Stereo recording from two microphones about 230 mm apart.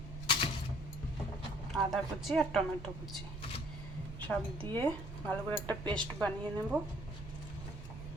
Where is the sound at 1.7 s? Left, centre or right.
Centre.